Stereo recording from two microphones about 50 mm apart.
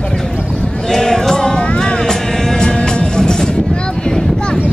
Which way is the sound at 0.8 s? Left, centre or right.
Centre.